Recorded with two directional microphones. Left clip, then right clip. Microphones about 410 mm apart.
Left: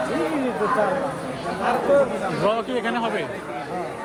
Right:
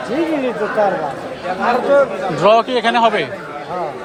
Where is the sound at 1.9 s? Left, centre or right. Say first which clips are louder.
Right 6 dB; right.